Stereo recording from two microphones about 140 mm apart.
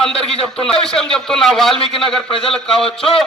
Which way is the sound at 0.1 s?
45° left (ahead or behind).